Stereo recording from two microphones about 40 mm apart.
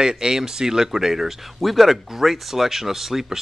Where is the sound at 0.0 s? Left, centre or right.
Centre.